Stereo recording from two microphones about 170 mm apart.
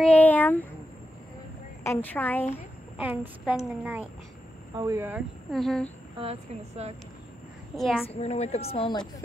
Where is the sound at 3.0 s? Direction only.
10° right (ahead or behind).